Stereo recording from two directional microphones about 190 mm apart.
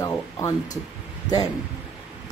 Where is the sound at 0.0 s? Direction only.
15° left (ahead or behind).